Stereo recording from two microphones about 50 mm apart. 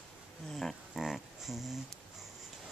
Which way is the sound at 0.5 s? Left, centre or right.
Centre.